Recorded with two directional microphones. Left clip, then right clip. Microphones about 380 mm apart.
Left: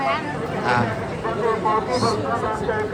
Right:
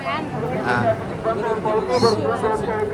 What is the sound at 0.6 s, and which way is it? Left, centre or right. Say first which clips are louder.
Speech: left 2 dB; centre.